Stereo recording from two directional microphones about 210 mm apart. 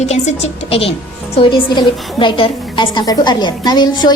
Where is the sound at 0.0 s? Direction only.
30° left (ahead or behind).